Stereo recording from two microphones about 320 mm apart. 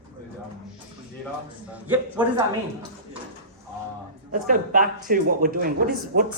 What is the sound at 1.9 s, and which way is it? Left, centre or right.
Speech, centre.